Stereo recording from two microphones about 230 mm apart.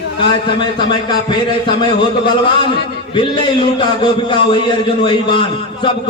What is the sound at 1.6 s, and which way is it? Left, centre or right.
A man's voice, centre.